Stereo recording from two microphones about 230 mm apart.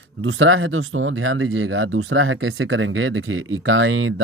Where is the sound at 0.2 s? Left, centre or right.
Right.